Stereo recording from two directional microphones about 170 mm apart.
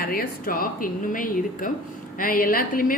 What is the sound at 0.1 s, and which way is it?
A woman's voice, 60° left (ahead or behind).